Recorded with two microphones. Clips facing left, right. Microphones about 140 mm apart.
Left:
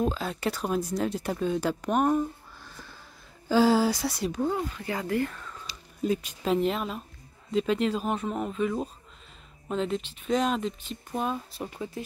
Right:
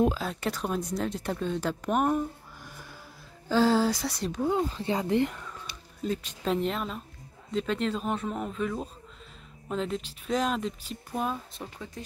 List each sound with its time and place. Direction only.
0.1 s speech: centre (ahead or behind)
3.4 s speech: 5° left (ahead or behind)
4.5 s speech: 25° right (ahead or behind)
5.7 s a sound: 60° right (ahead or behind)
6.0 s speech: 10° left (ahead or behind)
11.6 s speech: 10° left (ahead or behind)